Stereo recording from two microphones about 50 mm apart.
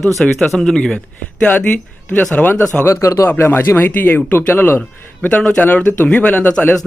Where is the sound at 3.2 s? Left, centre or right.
Left.